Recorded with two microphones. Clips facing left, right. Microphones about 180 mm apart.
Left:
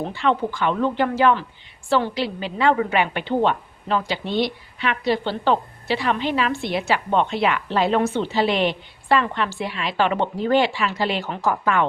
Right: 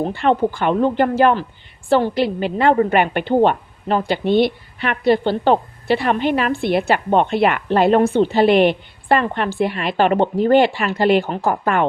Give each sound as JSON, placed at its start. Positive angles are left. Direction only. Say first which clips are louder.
{"t": 0.1, "sound": "a woman's voice", "louder": "right 5 dB", "side_deg": -55}